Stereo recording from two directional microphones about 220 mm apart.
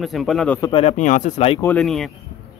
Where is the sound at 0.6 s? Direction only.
25° left (ahead or behind).